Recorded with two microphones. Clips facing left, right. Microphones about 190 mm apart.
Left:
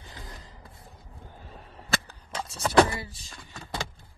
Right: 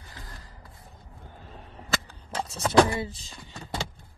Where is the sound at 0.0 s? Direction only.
20° left (ahead or behind).